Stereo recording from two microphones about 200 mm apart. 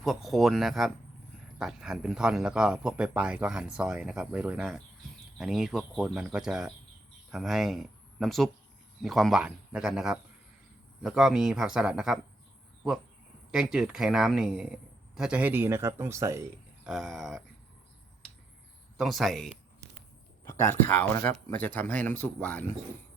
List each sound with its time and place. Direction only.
0.0 s speech: centre (ahead or behind)
13.5 s speech: 5° right (ahead or behind)
16.8 s speech: centre (ahead or behind)
18.9 s speech: centre (ahead or behind)
20.4 s a sound: 15° left (ahead or behind)
20.8 s speech: 10° left (ahead or behind)